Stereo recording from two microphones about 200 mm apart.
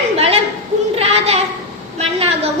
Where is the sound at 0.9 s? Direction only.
30° right (ahead or behind).